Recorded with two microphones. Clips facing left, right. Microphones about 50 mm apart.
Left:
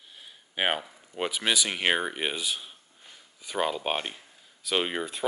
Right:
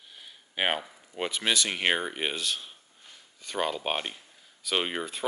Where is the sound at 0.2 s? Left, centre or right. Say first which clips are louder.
Left 1 dB; centre.